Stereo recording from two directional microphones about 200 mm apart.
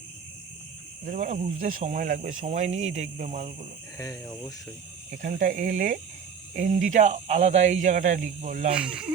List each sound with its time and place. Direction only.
1.0 s speech: 40° right (ahead or behind)
3.9 s speech: 15° left (ahead or behind)
5.1 s speech: 40° right (ahead or behind)
8.7 s speech: 5° right (ahead or behind)